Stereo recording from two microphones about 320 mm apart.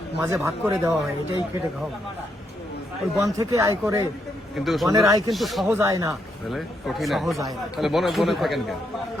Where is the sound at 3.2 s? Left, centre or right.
Centre.